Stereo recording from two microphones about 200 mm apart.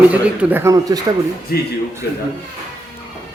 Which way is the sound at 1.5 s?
50° left (ahead or behind).